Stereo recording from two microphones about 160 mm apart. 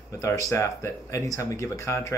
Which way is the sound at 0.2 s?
20° left (ahead or behind).